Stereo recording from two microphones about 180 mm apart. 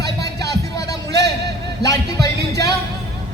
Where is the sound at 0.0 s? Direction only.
20° left (ahead or behind).